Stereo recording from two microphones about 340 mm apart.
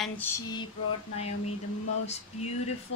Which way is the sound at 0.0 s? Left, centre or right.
Centre.